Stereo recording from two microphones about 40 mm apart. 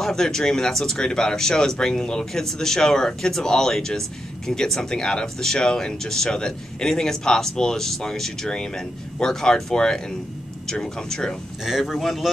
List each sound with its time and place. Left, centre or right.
0.0 s speech: centre
11.6 s speech: centre
12.0 s speech: centre